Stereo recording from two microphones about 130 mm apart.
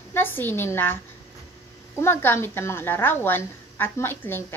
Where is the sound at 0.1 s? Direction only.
15° left (ahead or behind).